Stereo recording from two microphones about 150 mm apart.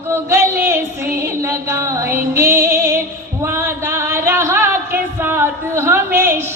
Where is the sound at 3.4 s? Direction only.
15° right (ahead or behind).